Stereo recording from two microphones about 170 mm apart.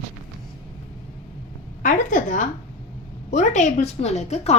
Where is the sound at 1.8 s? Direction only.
50° left (ahead or behind).